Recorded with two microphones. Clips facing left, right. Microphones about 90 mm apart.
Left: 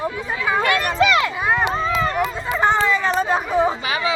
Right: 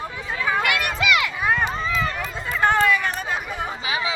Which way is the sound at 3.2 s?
30° left (ahead or behind).